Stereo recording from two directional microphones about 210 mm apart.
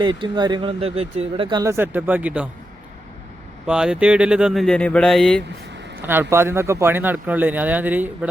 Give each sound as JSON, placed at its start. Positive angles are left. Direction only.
{"t": 0.0, "sound": "speech", "side_deg": -20}
{"t": 3.7, "sound": "speech", "side_deg": -5}
{"t": 6.0, "sound": "speech", "side_deg": -10}